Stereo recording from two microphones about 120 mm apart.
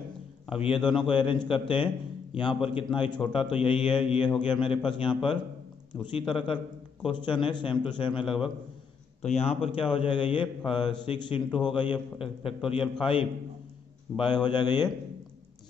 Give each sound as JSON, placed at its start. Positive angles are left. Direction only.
{"t": 0.5, "sound": "a man's voice", "side_deg": 50}
{"t": 9.2, "sound": "a man's voice", "side_deg": 60}